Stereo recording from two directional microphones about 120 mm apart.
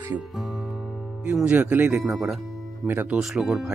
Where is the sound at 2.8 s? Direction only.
15° right (ahead or behind).